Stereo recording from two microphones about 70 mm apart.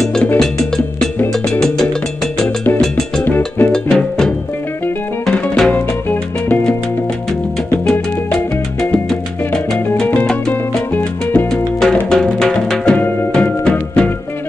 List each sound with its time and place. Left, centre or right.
0.0 s music: centre
1.5 s music: centre
3.3 s music: left
3.7 s music: centre
5.7 s music: left
8.9 s salsa music: centre
11.3 s music: centre